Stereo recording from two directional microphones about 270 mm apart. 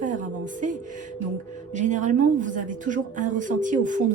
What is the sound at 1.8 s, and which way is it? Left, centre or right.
A woman's voice, right.